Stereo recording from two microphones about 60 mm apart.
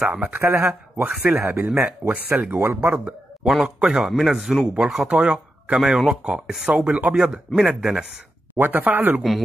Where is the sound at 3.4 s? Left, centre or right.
Centre.